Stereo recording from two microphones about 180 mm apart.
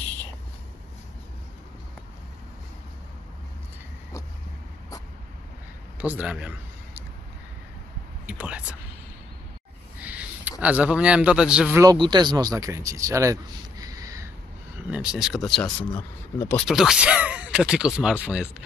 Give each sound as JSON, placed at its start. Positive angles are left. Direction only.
{"t": 5.9, "sound": "a man's voice", "side_deg": -10}
{"t": 8.3, "sound": "speech", "side_deg": -10}
{"t": 10.0, "sound": "a sound", "side_deg": -10}
{"t": 10.6, "sound": "a man's voice", "side_deg": -5}
{"t": 11.8, "sound": "speech", "side_deg": -25}
{"t": 14.9, "sound": "speech", "side_deg": -5}
{"t": 16.6, "sound": "a man's voice", "side_deg": -5}